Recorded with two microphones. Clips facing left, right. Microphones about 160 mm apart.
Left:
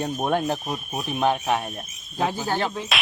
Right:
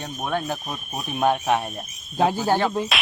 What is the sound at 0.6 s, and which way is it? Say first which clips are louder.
Speech: left 2 dB; 10° left (ahead or behind).